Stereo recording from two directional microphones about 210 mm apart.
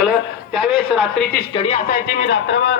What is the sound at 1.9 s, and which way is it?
Speech, 50° left (ahead or behind).